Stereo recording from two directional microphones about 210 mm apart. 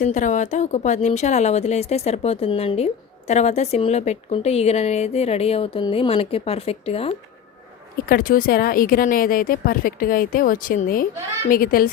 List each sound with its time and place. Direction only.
0.0 s a woman's voice: 35° left (ahead or behind)
8.0 s speech: 40° left (ahead or behind)